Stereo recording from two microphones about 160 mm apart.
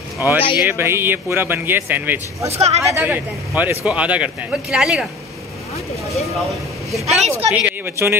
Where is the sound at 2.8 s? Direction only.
15° right (ahead or behind).